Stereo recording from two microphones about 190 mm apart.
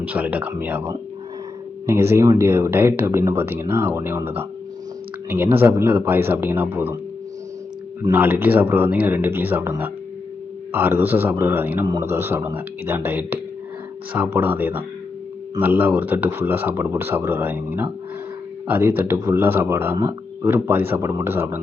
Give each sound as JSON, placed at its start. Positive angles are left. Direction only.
{"t": 0.1, "sound": "speech", "side_deg": -10}
{"t": 8.0, "sound": "speech", "side_deg": -10}